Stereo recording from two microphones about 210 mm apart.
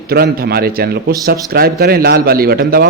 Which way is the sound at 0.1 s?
45° right (ahead or behind).